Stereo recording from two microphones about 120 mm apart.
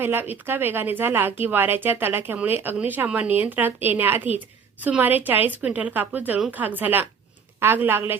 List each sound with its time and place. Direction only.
0.0 s speech: 20° right (ahead or behind)